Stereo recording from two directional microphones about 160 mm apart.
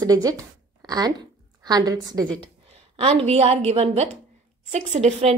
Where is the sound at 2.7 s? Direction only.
40° right (ahead or behind).